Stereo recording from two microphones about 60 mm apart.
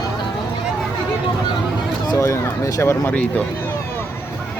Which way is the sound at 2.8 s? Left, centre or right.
Left.